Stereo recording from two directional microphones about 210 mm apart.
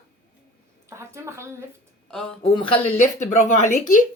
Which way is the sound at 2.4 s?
25° left (ahead or behind).